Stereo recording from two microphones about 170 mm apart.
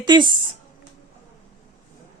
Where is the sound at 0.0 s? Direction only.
25° right (ahead or behind).